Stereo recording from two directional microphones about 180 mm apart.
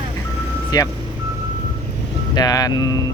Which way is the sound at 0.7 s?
20° left (ahead or behind).